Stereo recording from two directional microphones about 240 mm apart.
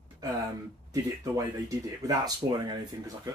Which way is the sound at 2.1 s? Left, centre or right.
Centre.